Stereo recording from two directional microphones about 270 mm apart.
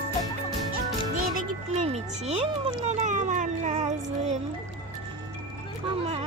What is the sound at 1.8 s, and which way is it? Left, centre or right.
Music, right.